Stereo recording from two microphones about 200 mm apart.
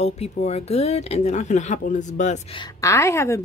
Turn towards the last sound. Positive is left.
turn(degrees=15)  # may be behind; listen again after turning